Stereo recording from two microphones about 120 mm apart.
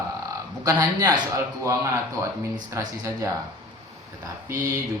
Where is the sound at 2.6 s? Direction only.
25° right (ahead or behind).